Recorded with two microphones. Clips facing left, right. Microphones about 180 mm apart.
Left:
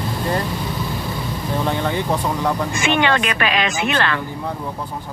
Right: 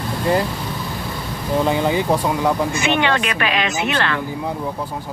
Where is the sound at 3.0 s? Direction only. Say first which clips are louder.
Left 1 dB; 45° left (ahead or behind).